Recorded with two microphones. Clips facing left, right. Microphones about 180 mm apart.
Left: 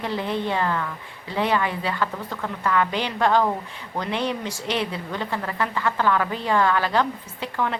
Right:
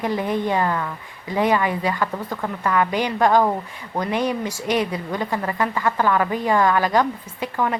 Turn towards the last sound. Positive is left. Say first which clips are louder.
# right 3 dB
turn(degrees=-15)  # may be behind; listen again after turning